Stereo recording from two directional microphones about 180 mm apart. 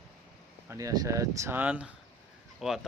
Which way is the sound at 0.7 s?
20° right (ahead or behind).